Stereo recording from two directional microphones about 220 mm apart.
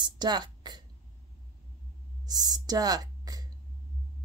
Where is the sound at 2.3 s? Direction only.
15° right (ahead or behind).